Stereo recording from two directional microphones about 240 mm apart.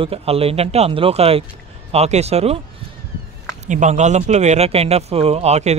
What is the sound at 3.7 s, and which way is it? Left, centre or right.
Speech, right.